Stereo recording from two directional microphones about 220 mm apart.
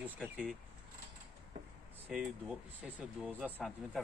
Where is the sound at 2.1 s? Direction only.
Centre (ahead or behind).